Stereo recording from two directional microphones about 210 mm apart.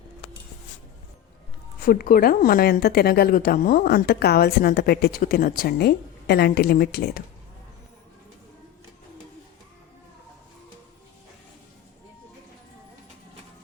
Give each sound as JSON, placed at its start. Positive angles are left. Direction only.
{"t": 1.8, "sound": "a woman's voice", "side_deg": 45}